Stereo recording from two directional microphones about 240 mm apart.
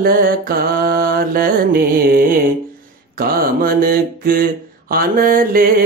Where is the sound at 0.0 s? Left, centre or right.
Right.